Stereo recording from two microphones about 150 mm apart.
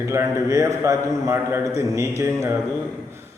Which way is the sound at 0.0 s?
20° right (ahead or behind).